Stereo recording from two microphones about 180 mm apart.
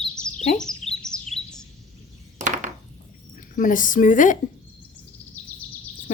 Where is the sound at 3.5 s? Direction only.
50° left (ahead or behind).